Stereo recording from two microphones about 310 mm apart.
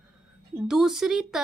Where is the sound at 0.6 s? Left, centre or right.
Centre.